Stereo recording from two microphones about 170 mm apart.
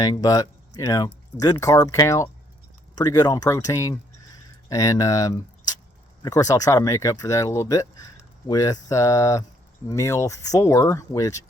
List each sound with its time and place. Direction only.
0.0 s speech: 20° left (ahead or behind)